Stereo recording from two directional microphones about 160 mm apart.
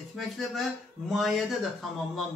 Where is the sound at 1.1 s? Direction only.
Centre (ahead or behind).